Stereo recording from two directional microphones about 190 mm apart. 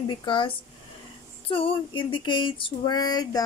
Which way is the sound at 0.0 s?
25° left (ahead or behind).